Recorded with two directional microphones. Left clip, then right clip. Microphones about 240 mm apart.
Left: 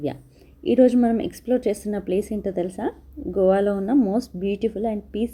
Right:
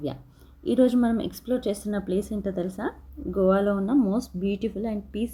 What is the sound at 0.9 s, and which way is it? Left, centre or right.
Speech, centre.